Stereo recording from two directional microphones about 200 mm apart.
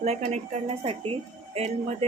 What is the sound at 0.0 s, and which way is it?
Speech, 35° right (ahead or behind).